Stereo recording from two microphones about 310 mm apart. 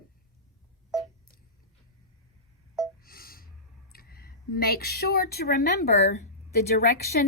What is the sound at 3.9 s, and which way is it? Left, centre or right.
A woman's voice, left.